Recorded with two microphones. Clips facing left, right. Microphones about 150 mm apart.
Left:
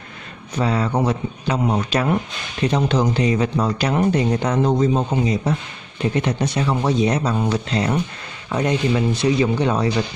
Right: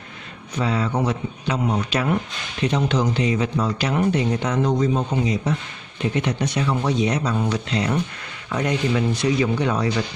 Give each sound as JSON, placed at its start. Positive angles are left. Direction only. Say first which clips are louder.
{"t": 0.6, "sound": "speech", "louder": "left 2 dB", "side_deg": 40}
{"t": 4.7, "sound": "speech", "louder": "left 2 dB", "side_deg": 25}
{"t": 8.5, "sound": "speech", "louder": "left 3 dB", "side_deg": 25}